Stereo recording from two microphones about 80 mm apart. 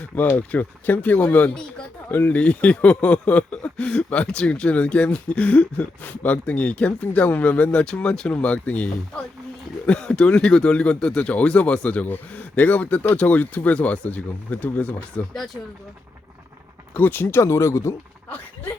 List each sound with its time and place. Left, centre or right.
0.3 s speech: left
16.9 s speech: left